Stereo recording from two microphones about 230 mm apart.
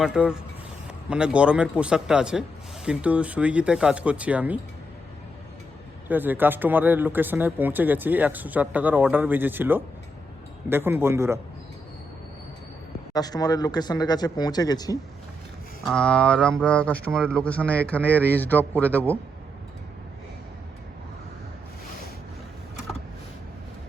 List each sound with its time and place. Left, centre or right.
0.0 s speech: centre
6.1 s speech: centre
13.1 s speech: centre
15.9 s speech: centre